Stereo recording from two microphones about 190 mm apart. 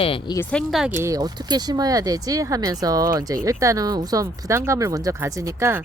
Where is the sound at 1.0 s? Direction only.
20° right (ahead or behind).